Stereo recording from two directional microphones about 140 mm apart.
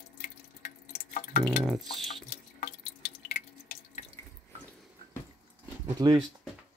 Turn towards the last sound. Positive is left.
turn(degrees=-30)  # may be behind; listen again after turning